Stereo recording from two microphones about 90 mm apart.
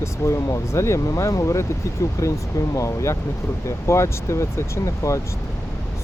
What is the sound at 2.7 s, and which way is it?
Speech, 35° left (ahead or behind).